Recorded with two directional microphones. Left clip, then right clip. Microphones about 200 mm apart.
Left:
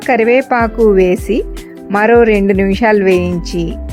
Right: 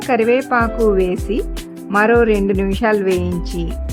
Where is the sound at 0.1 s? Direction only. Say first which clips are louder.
Left 4 dB; 15° left (ahead or behind).